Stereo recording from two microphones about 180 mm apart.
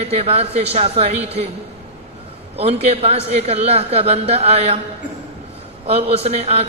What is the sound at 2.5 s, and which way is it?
A man's voice, 35° right (ahead or behind).